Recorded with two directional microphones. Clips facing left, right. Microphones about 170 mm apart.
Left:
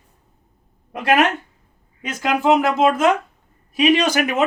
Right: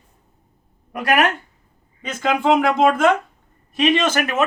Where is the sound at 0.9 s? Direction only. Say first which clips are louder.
Left 2 dB; 25° left (ahead or behind).